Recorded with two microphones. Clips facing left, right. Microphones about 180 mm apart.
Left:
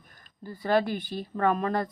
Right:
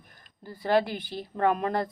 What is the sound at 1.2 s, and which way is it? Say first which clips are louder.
Speech: right 1 dB; 15° right (ahead or behind).